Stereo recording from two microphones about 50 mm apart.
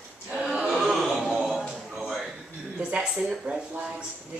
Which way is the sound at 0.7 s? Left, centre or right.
Centre.